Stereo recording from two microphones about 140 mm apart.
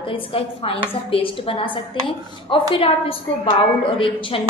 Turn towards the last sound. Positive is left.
turn(degrees=40)  # may be behind; listen again after turning